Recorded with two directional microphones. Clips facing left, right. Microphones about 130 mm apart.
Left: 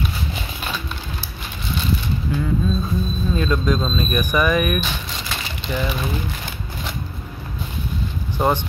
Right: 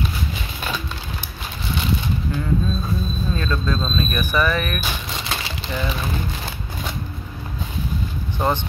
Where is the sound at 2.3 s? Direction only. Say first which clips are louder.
Left 3 dB; 10° left (ahead or behind).